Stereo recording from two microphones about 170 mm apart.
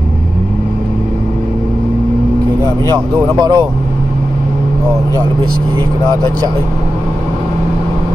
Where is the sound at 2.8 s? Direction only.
20° right (ahead or behind).